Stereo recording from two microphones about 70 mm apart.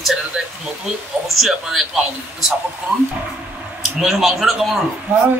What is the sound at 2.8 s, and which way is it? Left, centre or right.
Speech, centre.